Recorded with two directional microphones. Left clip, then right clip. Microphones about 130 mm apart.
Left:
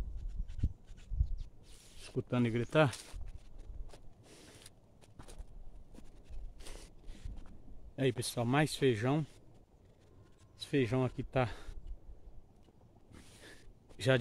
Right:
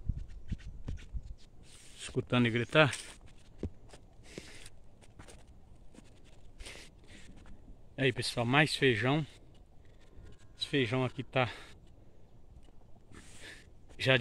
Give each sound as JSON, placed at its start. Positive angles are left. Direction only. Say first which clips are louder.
{"t": 2.0, "sound": "a sound", "louder": "right 5 dB", "side_deg": -15}
{"t": 2.4, "sound": "speech", "louder": "right 3 dB", "side_deg": 0}
{"t": 2.9, "sound": "speech", "louder": "right 6 dB", "side_deg": -15}
{"t": 4.6, "sound": "walk", "louder": "right 2 dB", "side_deg": -10}
{"t": 7.9, "sound": "speech", "louder": "right 3 dB", "side_deg": 10}
{"t": 10.6, "sound": "speech", "louder": "right 2 dB", "side_deg": 25}